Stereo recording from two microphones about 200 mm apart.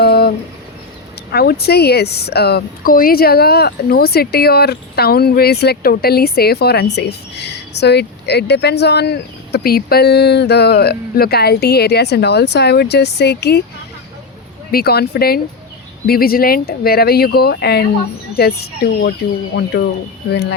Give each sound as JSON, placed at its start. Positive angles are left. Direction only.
{"t": 0.0, "sound": "a sound", "side_deg": 50}
{"t": 1.3, "sound": "a woman's voice", "side_deg": 50}
{"t": 14.7, "sound": "a woman's voice", "side_deg": 50}